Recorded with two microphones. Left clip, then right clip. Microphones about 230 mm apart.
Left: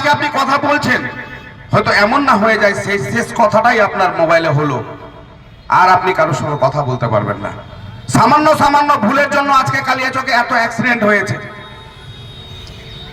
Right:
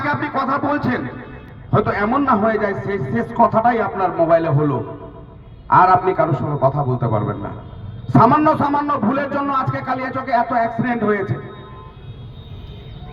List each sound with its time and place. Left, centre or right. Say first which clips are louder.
0.0 s a man's voice: left 7 dB; left